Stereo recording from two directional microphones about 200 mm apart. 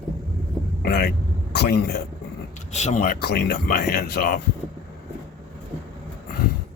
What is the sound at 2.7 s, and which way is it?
Speech, 35° left (ahead or behind).